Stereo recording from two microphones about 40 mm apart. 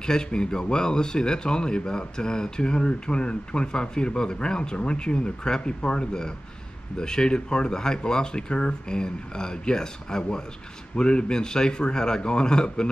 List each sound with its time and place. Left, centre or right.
0.0 s speech: centre